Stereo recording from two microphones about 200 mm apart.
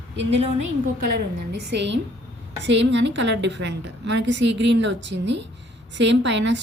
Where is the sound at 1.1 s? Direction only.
55° right (ahead or behind).